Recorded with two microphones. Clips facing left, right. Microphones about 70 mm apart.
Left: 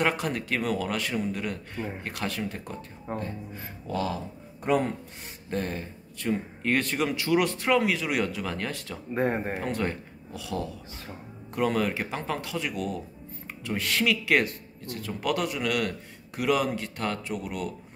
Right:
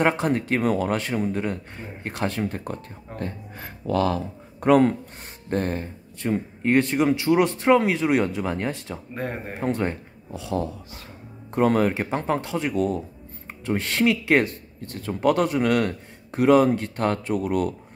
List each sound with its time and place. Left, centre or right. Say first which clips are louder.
0.0 s speech: right 5 dB; right
3.2 s speech: right 2 dB; right
5.5 s speech: right 6 dB; right
6.1 s speech: right 3 dB; right
9.1 s speech: left 5 dB; left
9.6 s speech: right 4 dB; right